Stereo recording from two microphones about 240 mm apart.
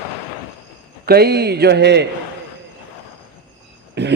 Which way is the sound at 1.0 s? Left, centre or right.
Right.